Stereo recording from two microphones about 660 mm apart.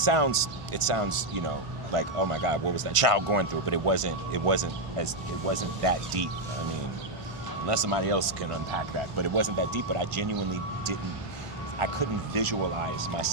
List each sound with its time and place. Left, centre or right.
0.0 s speech: right
7.7 s speech: right
9.1 s speech: right